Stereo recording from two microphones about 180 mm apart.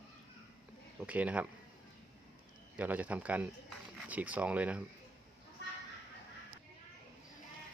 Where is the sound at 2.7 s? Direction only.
10° right (ahead or behind).